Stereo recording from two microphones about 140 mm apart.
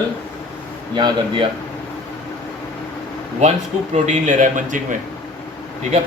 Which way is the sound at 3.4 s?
55° right (ahead or behind).